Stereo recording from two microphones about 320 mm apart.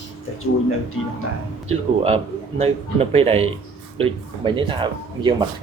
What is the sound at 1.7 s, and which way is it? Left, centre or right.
Speech, centre.